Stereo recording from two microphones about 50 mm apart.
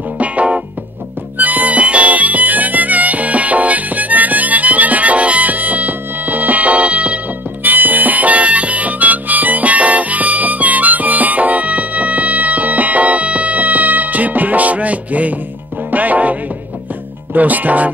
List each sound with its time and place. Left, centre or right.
0.2 s music: right
7.6 s harmonica: right
15.9 s music: right
17.3 s speech: right